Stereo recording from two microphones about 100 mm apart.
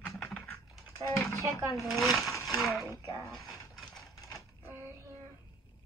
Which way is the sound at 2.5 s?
Centre (ahead or behind).